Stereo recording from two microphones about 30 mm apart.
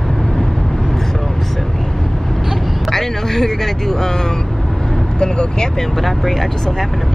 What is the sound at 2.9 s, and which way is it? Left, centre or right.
Speech, centre.